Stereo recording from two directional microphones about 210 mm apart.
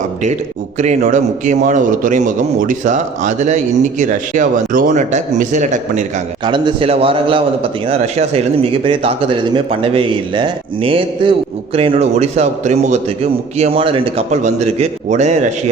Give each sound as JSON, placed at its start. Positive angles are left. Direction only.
{"t": 0.8, "sound": "a man's voice", "side_deg": -35}
{"t": 6.4, "sound": "a man's voice", "side_deg": -25}